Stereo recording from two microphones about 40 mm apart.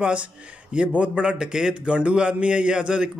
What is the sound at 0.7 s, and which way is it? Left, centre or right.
A man's voice, right.